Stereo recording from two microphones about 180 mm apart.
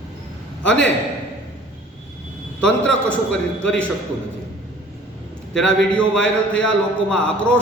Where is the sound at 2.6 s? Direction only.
5° left (ahead or behind).